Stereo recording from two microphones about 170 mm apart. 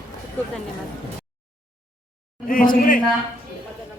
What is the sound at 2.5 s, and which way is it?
Speech, 55° left (ahead or behind).